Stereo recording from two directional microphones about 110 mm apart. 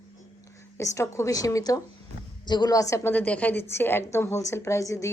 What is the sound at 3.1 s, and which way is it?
A woman's voice, 15° left (ahead or behind).